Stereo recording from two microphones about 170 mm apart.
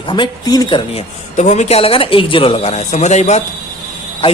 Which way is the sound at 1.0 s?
40° left (ahead or behind).